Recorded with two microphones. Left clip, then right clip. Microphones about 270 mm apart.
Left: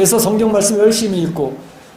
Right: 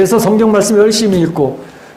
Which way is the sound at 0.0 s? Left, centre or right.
Centre.